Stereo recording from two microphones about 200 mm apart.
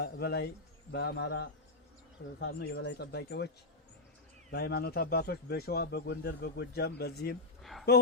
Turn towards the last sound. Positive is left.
turn(degrees=0)  # may be behind; listen again after turning